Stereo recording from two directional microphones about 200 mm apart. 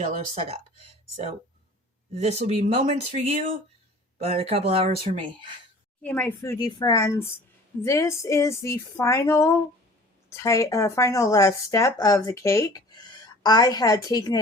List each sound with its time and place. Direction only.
0.3 s speech: 30° right (ahead or behind)
2.1 s speech: 35° right (ahead or behind)
6.0 s speech: 10° left (ahead or behind)